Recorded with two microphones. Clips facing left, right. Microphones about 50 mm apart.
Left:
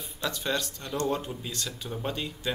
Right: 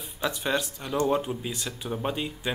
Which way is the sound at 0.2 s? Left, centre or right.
Centre.